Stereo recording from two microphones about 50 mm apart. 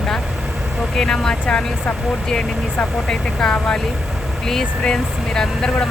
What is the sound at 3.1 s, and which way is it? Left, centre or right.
Speech, centre.